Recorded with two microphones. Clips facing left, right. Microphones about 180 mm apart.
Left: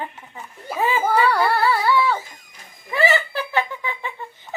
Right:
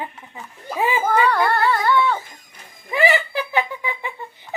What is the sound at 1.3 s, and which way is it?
Humming, 5° left (ahead or behind).